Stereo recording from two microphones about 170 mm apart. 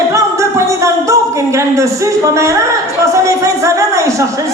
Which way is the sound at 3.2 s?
20° right (ahead or behind).